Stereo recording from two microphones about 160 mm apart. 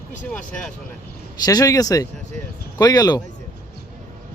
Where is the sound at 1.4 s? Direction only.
20° left (ahead or behind).